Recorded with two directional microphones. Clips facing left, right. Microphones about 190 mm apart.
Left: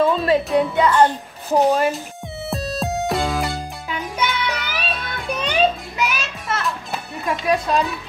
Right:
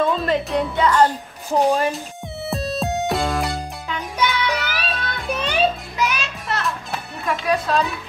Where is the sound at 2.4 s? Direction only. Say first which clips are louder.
Right 1 dB; centre (ahead or behind).